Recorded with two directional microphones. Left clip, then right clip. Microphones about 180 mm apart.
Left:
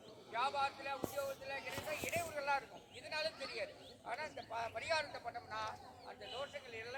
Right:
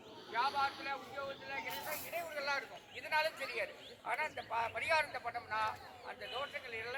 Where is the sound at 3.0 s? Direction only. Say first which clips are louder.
Right 6 dB; 10° right (ahead or behind).